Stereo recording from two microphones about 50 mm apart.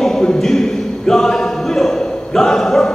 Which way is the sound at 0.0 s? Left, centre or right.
Centre.